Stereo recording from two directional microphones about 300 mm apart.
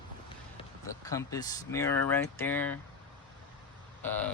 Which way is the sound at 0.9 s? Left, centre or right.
Centre.